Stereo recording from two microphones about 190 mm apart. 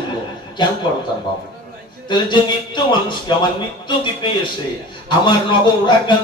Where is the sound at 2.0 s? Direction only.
25° left (ahead or behind).